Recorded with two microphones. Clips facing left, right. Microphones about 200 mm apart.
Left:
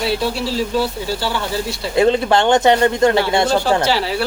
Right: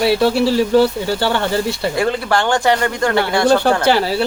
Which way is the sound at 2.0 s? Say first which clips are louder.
Left 6 dB; 20° left (ahead or behind).